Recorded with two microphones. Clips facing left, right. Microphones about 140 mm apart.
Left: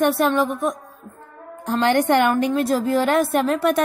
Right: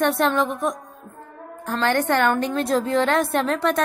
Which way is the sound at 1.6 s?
15° left (ahead or behind).